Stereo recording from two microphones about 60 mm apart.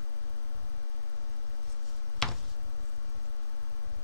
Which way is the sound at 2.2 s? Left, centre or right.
Centre.